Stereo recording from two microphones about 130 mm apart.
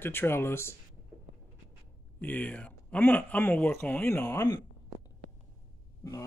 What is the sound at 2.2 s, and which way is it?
Speech, 15° left (ahead or behind).